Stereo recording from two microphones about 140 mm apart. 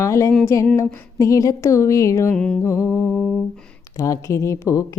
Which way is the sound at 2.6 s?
20° left (ahead or behind).